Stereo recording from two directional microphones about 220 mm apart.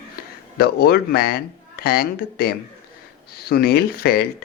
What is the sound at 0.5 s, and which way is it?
Speech, 45° left (ahead or behind).